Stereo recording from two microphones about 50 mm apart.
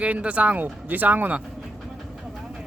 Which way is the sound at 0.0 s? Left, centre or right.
Right.